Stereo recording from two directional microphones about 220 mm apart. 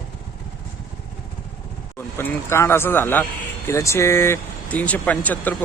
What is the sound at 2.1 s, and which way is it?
Speech, 10° left (ahead or behind).